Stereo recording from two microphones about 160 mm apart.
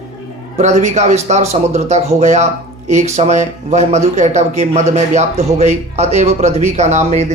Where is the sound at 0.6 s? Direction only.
45° right (ahead or behind).